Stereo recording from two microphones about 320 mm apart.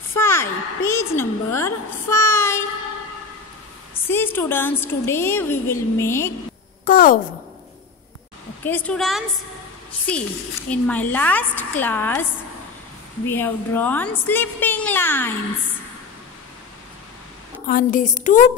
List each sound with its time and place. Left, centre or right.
0.1 s a woman's voice: centre
3.9 s a woman's voice: centre
6.8 s a woman's voice: left
8.6 s a woman's voice: centre
13.3 s a woman's voice: centre
17.6 s a sound: left